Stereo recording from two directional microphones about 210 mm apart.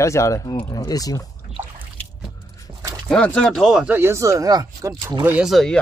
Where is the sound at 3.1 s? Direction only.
5° left (ahead or behind).